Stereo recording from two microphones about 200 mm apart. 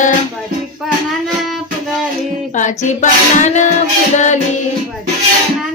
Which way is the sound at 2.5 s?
40° left (ahead or behind).